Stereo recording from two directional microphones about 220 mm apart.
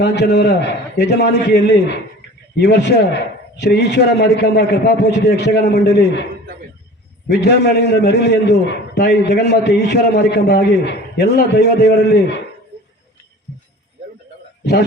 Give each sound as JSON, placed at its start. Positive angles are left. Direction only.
{"t": 0.0, "sound": "a man's voice", "side_deg": 50}
{"t": 7.3, "sound": "a man's voice", "side_deg": 50}
{"t": 14.6, "sound": "a man's voice", "side_deg": 50}